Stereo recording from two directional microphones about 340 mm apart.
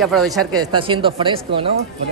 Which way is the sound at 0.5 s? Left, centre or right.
Centre.